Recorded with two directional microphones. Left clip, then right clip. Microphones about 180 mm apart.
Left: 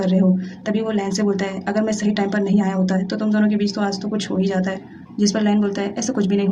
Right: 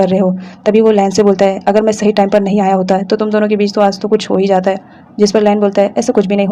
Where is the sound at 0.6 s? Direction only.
35° right (ahead or behind).